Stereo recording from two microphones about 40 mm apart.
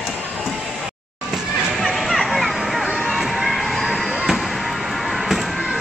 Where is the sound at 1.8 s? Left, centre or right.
Centre.